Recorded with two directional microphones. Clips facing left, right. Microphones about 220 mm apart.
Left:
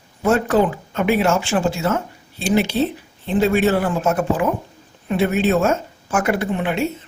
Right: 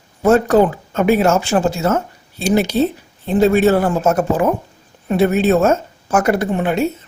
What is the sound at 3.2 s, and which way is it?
Speech, 45° right (ahead or behind).